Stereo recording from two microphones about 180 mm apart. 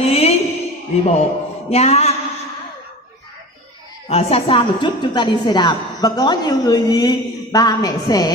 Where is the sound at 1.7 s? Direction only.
35° left (ahead or behind).